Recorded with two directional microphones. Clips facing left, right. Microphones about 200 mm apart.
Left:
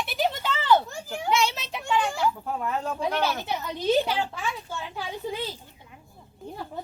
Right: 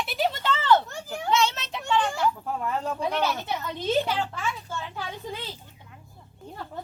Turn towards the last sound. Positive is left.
turn(degrees=10)  # may be behind; listen again after turning